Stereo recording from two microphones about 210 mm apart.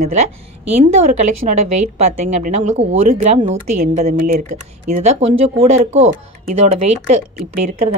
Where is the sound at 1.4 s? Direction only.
30° right (ahead or behind).